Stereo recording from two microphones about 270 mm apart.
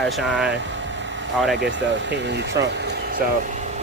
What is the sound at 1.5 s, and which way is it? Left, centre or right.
Speech, right.